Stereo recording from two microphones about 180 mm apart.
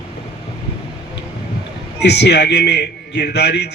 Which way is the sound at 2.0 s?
70° left (ahead or behind).